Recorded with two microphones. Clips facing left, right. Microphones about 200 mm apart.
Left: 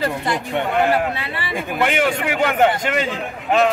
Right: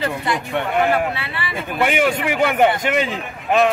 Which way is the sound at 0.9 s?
40° left (ahead or behind).